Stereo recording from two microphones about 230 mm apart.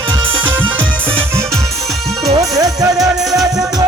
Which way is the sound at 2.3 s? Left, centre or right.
Centre.